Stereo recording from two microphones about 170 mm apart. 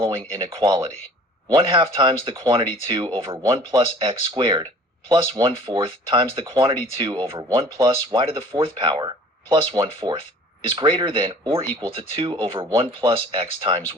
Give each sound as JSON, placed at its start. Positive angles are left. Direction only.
{"t": 0.0, "sound": "speech", "side_deg": -30}